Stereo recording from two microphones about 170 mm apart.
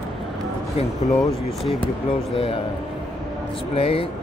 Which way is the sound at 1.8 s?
30° left (ahead or behind).